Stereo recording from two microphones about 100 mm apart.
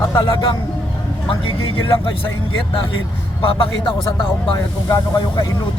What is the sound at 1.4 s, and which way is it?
Speech, 65° left (ahead or behind).